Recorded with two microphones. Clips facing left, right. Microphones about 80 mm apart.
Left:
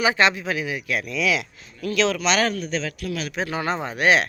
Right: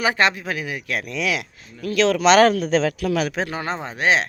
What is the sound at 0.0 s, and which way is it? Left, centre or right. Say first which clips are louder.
Speech: even; right.